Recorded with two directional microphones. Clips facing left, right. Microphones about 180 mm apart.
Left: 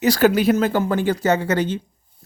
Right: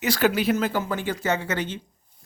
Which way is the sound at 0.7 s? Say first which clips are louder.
Left 6 dB; 60° left (ahead or behind).